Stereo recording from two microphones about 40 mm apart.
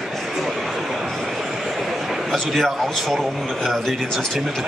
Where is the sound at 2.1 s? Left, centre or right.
Centre.